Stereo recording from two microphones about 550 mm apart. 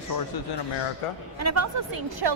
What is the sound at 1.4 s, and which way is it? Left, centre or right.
Speech, right.